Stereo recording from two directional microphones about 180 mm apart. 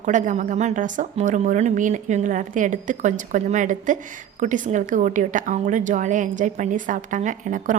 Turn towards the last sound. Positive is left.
turn(degrees=-45)  # may be behind; listen again after turning